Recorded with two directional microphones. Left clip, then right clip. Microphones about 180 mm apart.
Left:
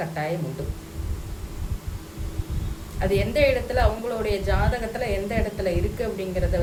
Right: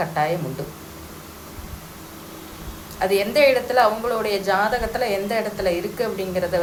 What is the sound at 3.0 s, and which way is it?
A woman's voice, 15° left (ahead or behind).